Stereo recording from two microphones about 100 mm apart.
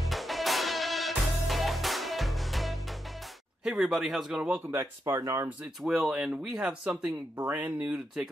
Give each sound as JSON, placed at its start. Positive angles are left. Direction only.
{"t": 0.1, "sound": "music", "side_deg": 0}
{"t": 3.6, "sound": "a man's voice", "side_deg": -5}
{"t": 5.0, "sound": "speech", "side_deg": -30}
{"t": 5.9, "sound": "speech", "side_deg": -5}